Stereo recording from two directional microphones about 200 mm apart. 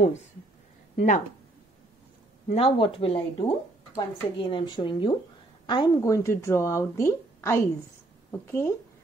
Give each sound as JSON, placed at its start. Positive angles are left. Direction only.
{"t": 0.9, "sound": "a woman's voice", "side_deg": 40}
{"t": 2.5, "sound": "speech", "side_deg": 30}